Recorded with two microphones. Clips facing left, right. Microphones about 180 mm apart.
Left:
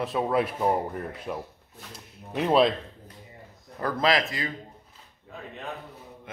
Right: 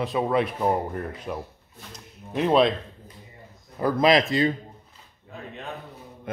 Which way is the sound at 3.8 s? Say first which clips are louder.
Right 5 dB; 20° right (ahead or behind).